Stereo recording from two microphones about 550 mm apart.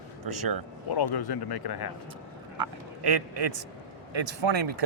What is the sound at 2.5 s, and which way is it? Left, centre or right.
A man's voice, right.